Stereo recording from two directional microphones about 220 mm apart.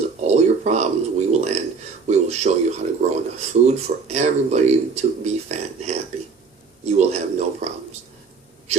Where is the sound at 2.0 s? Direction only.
30° right (ahead or behind).